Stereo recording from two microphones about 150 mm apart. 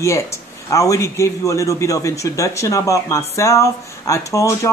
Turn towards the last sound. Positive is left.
turn(degrees=20)  # may be behind; listen again after turning